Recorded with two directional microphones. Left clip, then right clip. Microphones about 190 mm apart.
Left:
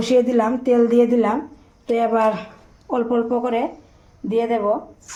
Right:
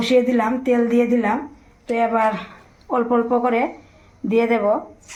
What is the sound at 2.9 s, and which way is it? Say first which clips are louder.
A woman's voice: right 2 dB; 20° left (ahead or behind).